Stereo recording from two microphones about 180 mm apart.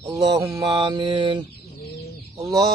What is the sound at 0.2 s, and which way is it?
Bird, 20° right (ahead or behind).